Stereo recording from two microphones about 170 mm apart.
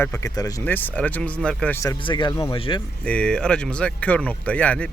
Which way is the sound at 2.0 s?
25° left (ahead or behind).